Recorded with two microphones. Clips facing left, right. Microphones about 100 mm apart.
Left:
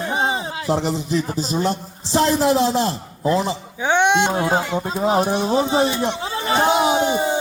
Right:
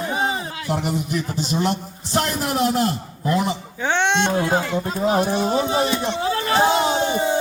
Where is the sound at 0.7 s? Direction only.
30° left (ahead or behind).